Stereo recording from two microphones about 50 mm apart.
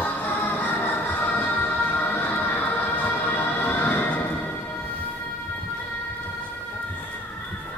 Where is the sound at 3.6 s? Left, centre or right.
Left.